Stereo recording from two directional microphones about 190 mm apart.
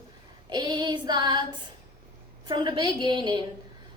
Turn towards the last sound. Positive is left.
turn(degrees=-25)  # may be behind; listen again after turning